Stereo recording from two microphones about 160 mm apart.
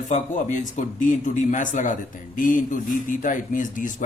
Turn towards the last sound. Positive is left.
turn(degrees=55)  # may be behind; listen again after turning